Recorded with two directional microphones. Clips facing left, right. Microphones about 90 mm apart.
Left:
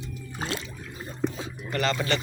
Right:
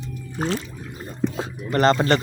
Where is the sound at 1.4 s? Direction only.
45° right (ahead or behind).